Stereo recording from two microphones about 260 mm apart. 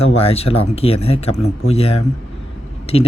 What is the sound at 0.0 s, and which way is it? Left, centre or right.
Speech, left.